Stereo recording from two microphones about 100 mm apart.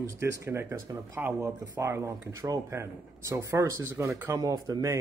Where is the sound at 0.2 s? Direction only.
25° right (ahead or behind).